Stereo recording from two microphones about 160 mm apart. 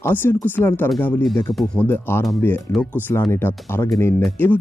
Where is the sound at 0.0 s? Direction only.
15° left (ahead or behind).